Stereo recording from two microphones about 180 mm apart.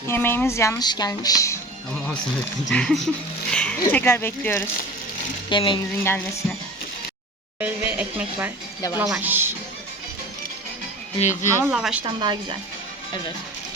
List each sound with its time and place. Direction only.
0.1 s speech: 10° left (ahead or behind)
2.6 s speech: centre (ahead or behind)
5.5 s speech: 25° left (ahead or behind)
6.0 s speech: 10° left (ahead or behind)
7.6 s a woman's voice: 10° right (ahead or behind)
11.4 s a woman's voice: 10° right (ahead or behind)
12.0 s a woman's voice: 25° right (ahead or behind)